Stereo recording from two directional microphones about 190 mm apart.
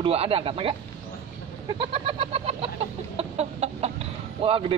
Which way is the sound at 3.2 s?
35° right (ahead or behind).